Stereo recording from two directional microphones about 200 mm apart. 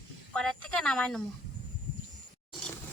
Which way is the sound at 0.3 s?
5° left (ahead or behind).